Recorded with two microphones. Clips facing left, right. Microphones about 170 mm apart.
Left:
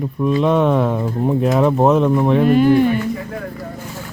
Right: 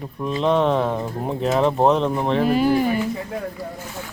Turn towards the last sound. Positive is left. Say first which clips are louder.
# left 5 dB
turn(degrees=-5)  # may be behind; listen again after turning